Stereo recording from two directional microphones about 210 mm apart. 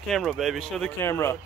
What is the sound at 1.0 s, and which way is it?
Speech, 10° left (ahead or behind).